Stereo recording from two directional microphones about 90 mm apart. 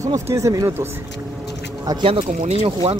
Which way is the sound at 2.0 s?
90° right.